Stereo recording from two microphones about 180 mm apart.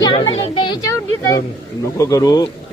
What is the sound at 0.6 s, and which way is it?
A man's voice, 25° left (ahead or behind).